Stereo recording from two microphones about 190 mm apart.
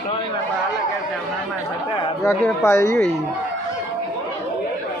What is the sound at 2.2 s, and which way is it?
Speech, 15° left (ahead or behind).